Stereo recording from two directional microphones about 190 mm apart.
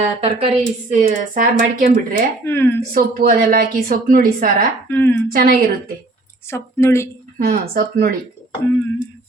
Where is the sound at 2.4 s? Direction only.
10° left (ahead or behind).